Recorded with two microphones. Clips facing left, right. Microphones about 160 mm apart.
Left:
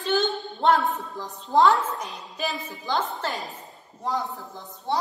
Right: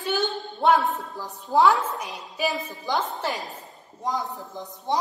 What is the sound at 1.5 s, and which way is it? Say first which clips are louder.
Speech: even; 5° right (ahead or behind).